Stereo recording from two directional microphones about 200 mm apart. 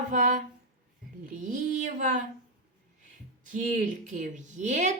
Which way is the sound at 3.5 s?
40° right (ahead or behind).